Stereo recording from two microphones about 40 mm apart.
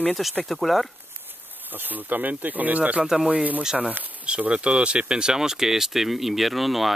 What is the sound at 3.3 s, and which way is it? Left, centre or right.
Speech, right.